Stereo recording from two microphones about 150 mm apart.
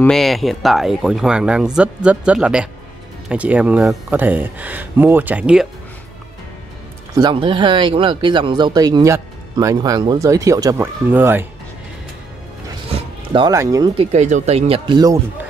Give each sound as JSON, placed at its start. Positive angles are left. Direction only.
{"t": 0.0, "sound": "speech", "side_deg": 0}
{"t": 7.2, "sound": "speech", "side_deg": -30}
{"t": 13.3, "sound": "speech", "side_deg": -30}
{"t": 13.9, "sound": "speech", "side_deg": -50}
{"t": 14.9, "sound": "speech", "side_deg": -25}